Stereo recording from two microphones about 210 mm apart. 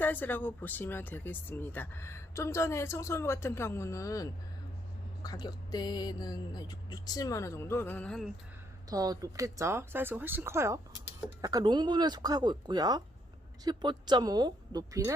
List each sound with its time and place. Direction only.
0.0 s speech: 10° left (ahead or behind)
8.9 s speech: 15° right (ahead or behind)